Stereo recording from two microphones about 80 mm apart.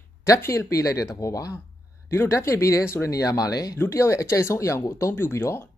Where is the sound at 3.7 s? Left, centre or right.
Left.